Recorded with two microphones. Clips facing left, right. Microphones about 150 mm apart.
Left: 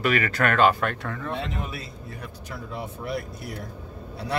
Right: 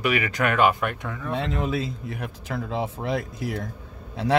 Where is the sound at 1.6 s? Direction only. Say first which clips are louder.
Right 8 dB; 90° right.